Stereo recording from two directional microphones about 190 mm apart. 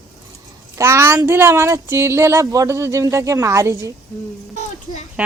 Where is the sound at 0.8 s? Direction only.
15° right (ahead or behind).